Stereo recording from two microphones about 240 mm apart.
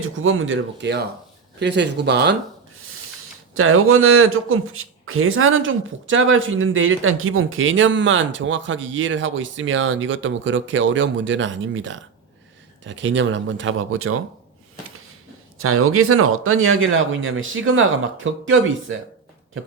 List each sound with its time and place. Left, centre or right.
0.0 s speech: right
3.5 s speech: right
15.6 s speech: right